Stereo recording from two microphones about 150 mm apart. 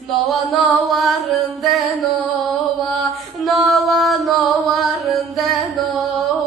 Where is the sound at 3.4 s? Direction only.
Centre (ahead or behind).